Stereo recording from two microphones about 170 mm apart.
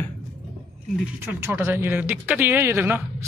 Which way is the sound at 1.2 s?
15° right (ahead or behind).